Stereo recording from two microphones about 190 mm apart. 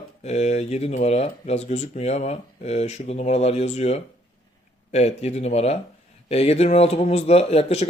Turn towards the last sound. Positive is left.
turn(degrees=35)  # may be behind; listen again after turning